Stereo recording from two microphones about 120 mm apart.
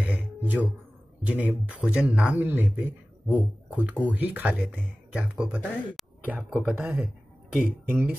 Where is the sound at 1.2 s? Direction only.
10° right (ahead or behind).